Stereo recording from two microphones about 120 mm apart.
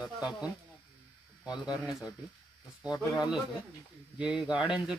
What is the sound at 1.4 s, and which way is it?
Speech, 35° left (ahead or behind).